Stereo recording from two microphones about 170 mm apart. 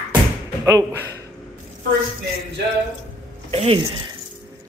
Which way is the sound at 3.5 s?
35° right (ahead or behind).